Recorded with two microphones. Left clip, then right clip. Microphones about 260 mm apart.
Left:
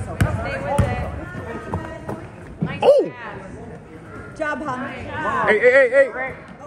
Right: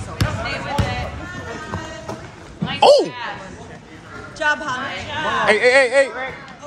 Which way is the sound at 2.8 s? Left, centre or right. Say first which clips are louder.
Right 3 dB; centre.